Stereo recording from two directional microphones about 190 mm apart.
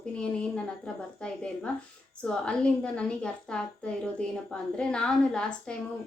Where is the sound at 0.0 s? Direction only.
5° left (ahead or behind).